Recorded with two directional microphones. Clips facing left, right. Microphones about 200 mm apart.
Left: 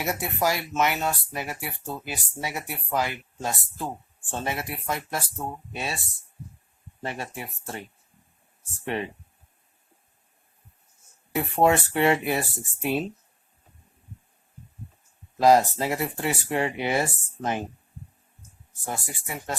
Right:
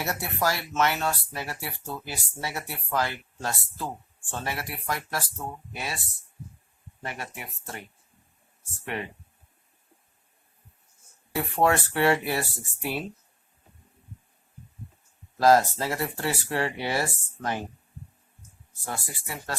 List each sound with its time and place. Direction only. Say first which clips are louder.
0.0 s speech: left 2 dB; 15° left (ahead or behind)
7.0 s speech: left 4 dB; 30° left (ahead or behind)
11.3 s speech: left 2 dB; 20° left (ahead or behind)
15.4 s speech: left 1 dB; 15° left (ahead or behind)